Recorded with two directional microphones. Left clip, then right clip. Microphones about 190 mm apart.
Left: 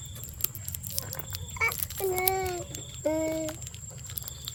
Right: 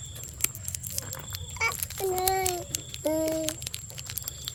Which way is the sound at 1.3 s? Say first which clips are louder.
Even; 25° right (ahead or behind).